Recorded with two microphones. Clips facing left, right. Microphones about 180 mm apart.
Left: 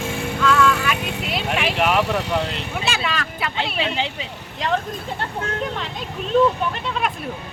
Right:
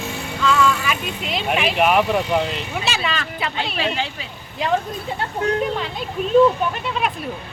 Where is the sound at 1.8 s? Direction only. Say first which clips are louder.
Right 3 dB; 20° right (ahead or behind).